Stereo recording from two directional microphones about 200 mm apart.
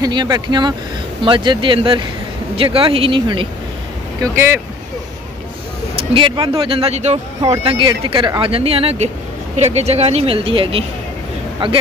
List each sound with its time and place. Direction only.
0.0 s speech: 20° right (ahead or behind)
4.2 s speech: 10° right (ahead or behind)
5.9 s speech: 25° right (ahead or behind)